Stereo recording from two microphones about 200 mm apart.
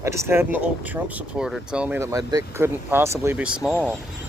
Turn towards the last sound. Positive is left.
turn(degrees=-5)  # may be behind; listen again after turning